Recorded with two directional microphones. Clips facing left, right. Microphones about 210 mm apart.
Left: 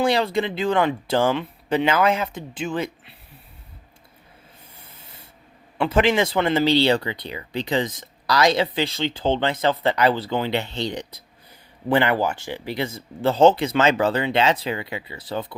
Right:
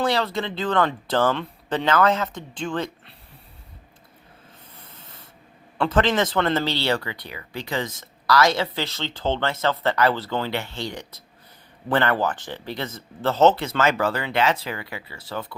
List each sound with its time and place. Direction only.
0.0 s speech: 15° left (ahead or behind)
4.9 s spray: 10° left (ahead or behind)
5.7 s speech: 10° left (ahead or behind)